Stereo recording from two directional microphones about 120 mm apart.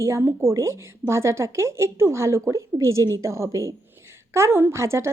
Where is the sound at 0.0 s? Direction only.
25° right (ahead or behind).